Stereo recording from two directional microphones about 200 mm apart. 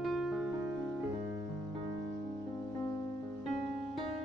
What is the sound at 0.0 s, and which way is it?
Music, centre (ahead or behind).